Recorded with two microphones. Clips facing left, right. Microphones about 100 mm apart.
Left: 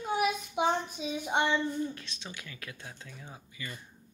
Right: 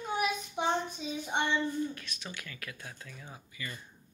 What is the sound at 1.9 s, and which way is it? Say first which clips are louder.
Speech: even; 25° left (ahead or behind).